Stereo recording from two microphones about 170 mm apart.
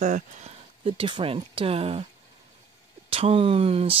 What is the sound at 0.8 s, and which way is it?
Speech, 30° right (ahead or behind).